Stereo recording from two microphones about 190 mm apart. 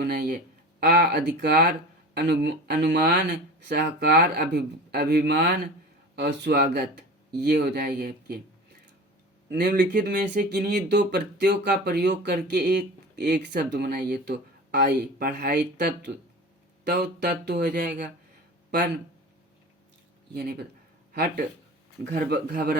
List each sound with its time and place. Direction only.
0.0 s speech: 55° right (ahead or behind)
9.5 s speech: 55° right (ahead or behind)
16.9 s speech: 60° right (ahead or behind)
20.3 s speech: 55° right (ahead or behind)